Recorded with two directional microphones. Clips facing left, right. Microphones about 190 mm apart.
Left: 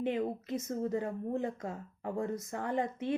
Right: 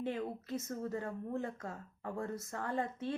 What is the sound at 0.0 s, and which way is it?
A woman's voice, 20° left (ahead or behind).